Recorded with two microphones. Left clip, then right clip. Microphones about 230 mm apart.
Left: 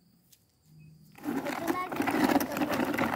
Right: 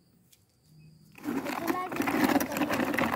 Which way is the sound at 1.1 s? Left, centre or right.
Centre.